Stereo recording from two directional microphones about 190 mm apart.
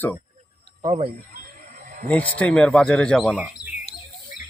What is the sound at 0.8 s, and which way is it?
Speech, 35° right (ahead or behind).